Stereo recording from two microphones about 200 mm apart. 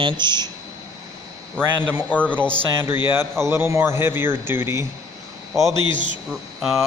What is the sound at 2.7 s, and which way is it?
A man's voice, 10° right (ahead or behind).